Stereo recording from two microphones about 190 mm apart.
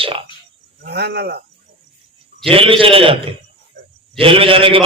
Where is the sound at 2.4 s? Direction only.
30° right (ahead or behind).